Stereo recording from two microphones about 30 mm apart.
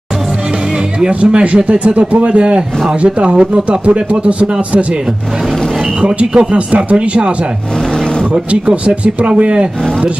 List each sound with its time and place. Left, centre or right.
1.2 s speech: right
6.3 s speech: right